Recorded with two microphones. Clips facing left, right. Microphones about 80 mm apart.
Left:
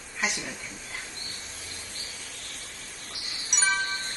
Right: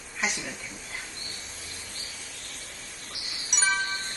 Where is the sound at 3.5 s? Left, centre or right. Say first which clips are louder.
Even; centre.